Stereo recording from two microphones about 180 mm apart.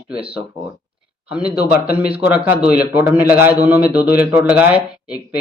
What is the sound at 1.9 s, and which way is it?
A man's voice, 10° right (ahead or behind).